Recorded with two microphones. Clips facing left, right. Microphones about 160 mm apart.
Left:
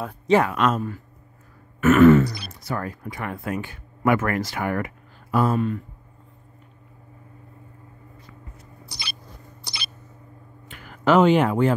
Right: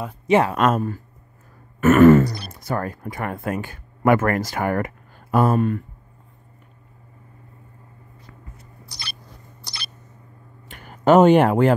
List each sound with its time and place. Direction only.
0.3 s speech: 30° right (ahead or behind)
0.6 s throat clearing: 50° right (ahead or behind)
2.5 s speech: 50° right (ahead or behind)
11.1 s speech: 45° right (ahead or behind); by 11.7 s 65° right (ahead or behind)